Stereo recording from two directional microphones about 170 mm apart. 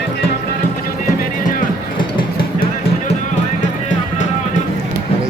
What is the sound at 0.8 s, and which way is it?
Music, 60° left (ahead or behind).